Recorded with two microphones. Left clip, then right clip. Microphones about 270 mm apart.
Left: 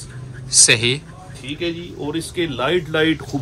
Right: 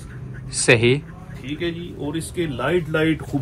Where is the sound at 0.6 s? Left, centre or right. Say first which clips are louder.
Right 1 dB; centre.